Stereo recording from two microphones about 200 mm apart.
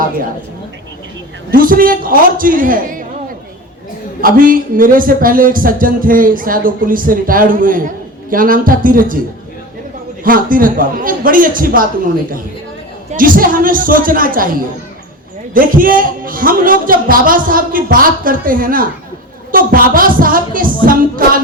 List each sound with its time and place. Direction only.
1.5 s speech: 45° right (ahead or behind)
4.2 s speech: 45° right (ahead or behind)
10.2 s speech: 45° right (ahead or behind)
13.1 s speech: 45° right (ahead or behind)